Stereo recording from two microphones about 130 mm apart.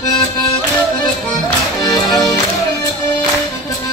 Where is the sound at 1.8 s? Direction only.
30° left (ahead or behind).